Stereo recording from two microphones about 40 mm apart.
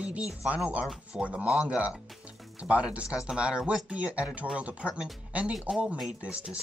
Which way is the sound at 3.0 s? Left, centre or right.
Right.